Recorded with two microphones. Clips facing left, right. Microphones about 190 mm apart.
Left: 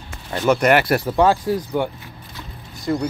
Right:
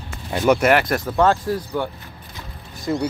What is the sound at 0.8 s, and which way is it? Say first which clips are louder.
Speech: left 2 dB; 10° left (ahead or behind).